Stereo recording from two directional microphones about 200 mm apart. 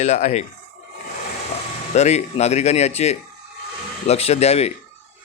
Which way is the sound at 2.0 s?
35° left (ahead or behind).